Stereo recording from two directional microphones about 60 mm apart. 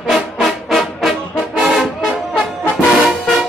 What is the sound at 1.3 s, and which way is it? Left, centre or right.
Brass instrument, centre.